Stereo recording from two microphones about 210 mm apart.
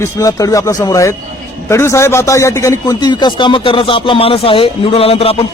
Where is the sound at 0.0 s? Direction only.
15° left (ahead or behind).